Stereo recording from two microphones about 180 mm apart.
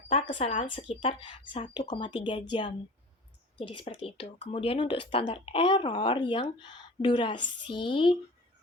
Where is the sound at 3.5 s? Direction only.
30° left (ahead or behind).